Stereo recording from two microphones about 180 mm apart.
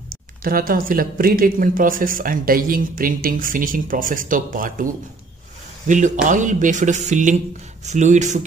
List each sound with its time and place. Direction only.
0.1 s speech: 50° right (ahead or behind)